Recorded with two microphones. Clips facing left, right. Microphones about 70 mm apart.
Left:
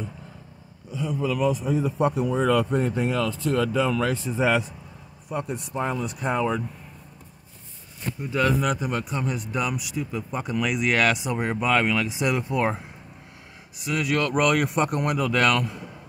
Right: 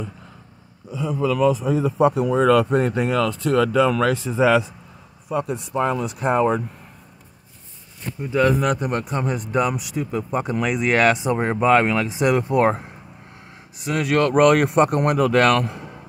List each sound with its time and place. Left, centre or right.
1.7 s speech: right
8.3 s speech: right
8.5 s speech: right
12.2 s speech: right
13.7 s speech: right